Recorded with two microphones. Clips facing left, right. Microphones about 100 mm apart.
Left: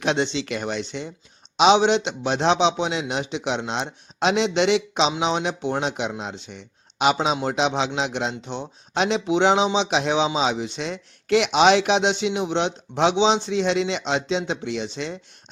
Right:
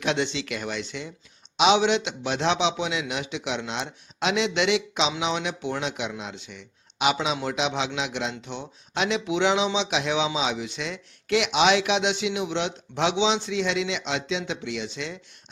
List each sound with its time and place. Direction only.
0.0 s a man's voice: 30° left (ahead or behind)